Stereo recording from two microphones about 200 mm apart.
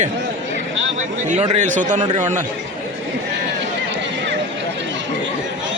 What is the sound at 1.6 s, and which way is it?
Speech, 40° right (ahead or behind).